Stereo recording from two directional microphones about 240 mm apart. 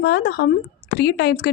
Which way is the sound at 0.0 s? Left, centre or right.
Left.